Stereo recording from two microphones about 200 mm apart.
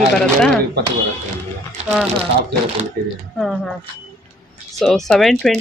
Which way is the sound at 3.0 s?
50° right (ahead or behind).